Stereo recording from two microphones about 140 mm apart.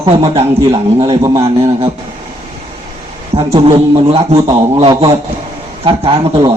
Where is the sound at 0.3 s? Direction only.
35° right (ahead or behind).